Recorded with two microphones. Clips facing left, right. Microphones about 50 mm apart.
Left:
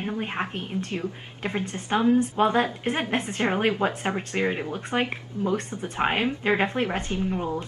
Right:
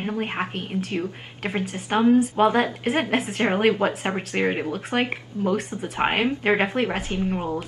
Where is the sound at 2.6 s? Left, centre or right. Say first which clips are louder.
Right 3 dB; centre.